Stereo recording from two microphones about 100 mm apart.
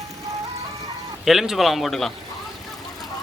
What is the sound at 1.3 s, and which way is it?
Speech, centre (ahead or behind).